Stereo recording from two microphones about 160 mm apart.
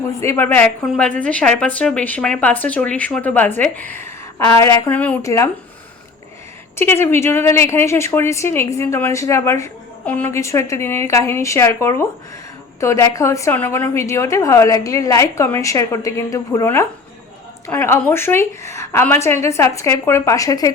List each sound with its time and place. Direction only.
0.2 s a woman's voice: 15° left (ahead or behind)
6.7 s a woman's voice: 15° left (ahead or behind)